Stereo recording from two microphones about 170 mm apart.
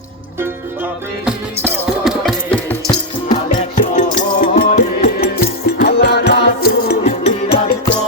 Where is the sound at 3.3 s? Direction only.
45° left (ahead or behind).